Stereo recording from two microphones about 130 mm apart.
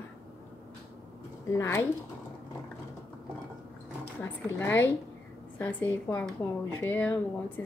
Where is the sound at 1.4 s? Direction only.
20° left (ahead or behind).